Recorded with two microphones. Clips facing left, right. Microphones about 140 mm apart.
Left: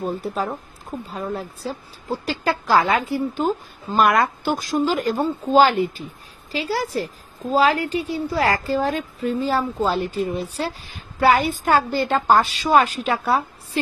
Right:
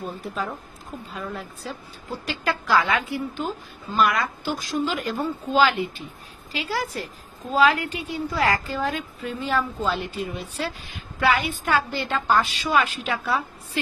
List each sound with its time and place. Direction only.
0.0 s a woman's voice: 35° left (ahead or behind)